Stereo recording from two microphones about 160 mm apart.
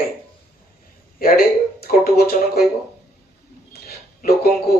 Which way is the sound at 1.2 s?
65° left (ahead or behind).